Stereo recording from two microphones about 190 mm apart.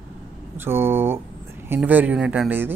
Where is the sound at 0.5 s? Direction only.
10° right (ahead or behind).